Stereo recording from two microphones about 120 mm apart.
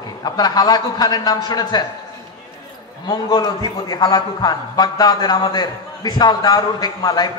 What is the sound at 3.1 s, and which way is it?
A man's voice, 35° left (ahead or behind).